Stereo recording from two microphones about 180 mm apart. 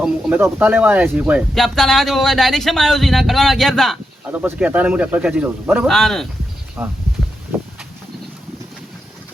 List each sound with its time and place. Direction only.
0.0 s speech: 10° right (ahead or behind)
4.3 s speech: 10° right (ahead or behind)
6.8 s speech: 10° right (ahead or behind)